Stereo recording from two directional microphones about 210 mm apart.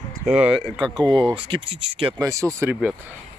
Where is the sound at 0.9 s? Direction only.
20° right (ahead or behind).